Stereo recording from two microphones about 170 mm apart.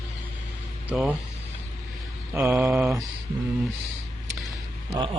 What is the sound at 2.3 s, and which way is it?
Speech, 10° right (ahead or behind).